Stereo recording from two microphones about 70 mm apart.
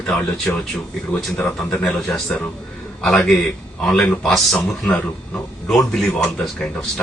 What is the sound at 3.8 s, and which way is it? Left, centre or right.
A man's voice, centre.